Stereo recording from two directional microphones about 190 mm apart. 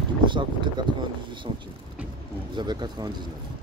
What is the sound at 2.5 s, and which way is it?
Speech, 25° right (ahead or behind).